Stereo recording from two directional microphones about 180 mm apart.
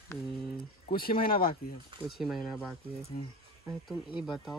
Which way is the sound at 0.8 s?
55° left (ahead or behind).